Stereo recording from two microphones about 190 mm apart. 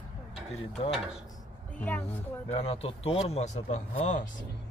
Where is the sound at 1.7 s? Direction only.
10° left (ahead or behind).